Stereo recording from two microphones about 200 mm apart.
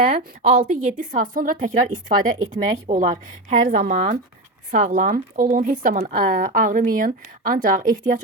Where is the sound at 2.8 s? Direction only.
35° right (ahead or behind).